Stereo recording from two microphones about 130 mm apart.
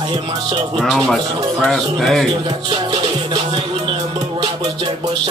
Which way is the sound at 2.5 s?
35° right (ahead or behind).